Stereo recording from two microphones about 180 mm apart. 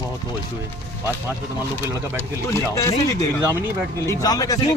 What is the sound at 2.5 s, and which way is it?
Speech, 15° left (ahead or behind).